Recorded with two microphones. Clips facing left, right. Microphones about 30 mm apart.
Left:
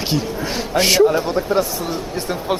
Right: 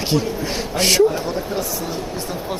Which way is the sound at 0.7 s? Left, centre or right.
Centre.